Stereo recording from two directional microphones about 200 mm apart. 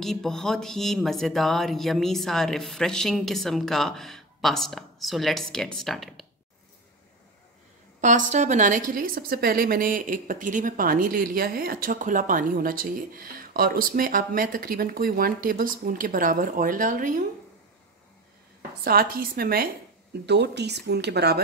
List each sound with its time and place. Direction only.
0.0 s speech: centre (ahead or behind)
8.0 s a woman's voice: 40° right (ahead or behind)
18.9 s a woman's voice: 50° right (ahead or behind)